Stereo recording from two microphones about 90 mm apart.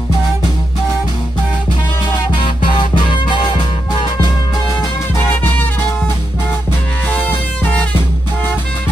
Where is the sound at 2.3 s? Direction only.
60° left (ahead or behind).